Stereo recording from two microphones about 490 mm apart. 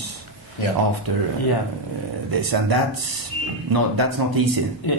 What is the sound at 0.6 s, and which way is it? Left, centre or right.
Speech, left.